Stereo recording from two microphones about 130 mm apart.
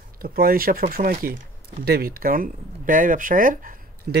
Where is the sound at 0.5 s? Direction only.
90° right.